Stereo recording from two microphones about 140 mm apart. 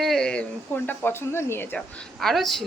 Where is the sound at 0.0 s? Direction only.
5° left (ahead or behind).